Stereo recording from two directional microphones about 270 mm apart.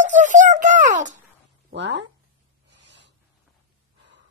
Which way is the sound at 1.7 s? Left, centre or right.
Right.